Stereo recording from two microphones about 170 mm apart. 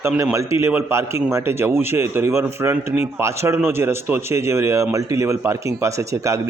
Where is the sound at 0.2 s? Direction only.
15° right (ahead or behind).